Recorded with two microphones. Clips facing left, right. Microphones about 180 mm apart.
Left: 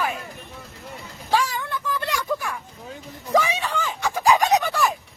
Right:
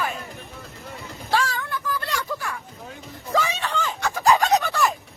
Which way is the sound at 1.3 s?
15° left (ahead or behind).